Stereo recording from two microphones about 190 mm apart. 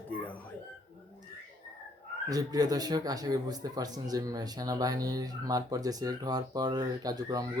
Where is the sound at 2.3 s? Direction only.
20° right (ahead or behind).